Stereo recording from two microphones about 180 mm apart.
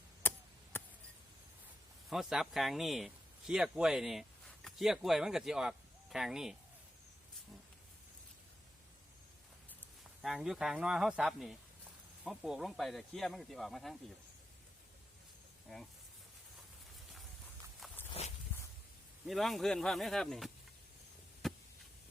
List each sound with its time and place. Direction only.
0.2 s a sound: 10° left (ahead or behind)
2.0 s speech: centre (ahead or behind)
10.2 s speech: centre (ahead or behind)
18.2 s walk: 35° left (ahead or behind)
19.2 s speech: centre (ahead or behind)
21.4 s a sound: centre (ahead or behind)